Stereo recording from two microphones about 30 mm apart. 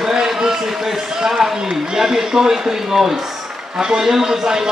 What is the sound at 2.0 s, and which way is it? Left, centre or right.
A man's voice, centre.